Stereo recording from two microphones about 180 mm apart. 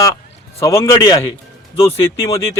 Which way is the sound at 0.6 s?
15° left (ahead or behind).